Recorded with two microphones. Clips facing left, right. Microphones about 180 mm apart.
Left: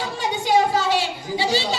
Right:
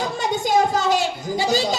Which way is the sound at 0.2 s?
45° right (ahead or behind).